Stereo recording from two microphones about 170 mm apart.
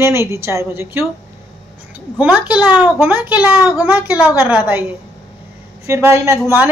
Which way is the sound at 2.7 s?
10° right (ahead or behind).